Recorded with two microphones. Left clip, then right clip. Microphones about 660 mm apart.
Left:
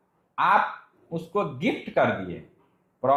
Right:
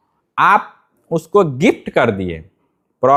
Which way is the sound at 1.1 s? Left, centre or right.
Right.